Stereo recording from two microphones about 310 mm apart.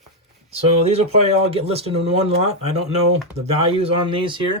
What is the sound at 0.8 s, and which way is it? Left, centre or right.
Speech, centre.